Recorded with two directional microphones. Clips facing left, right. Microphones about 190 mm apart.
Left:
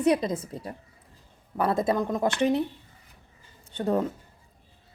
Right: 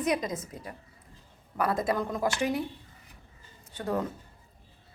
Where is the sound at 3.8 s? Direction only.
25° left (ahead or behind).